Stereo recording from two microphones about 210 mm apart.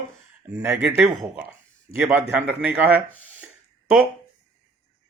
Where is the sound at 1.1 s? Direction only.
15° right (ahead or behind).